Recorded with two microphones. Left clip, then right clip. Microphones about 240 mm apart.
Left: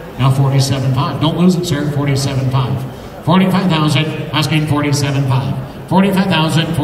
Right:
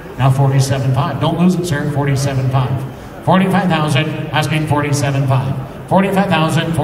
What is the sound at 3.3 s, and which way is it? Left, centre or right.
A man's voice, centre.